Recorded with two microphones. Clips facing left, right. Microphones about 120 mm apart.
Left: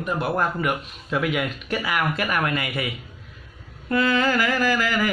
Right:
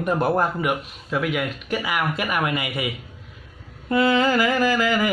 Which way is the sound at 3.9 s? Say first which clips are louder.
Right 2 dB; 20° right (ahead or behind).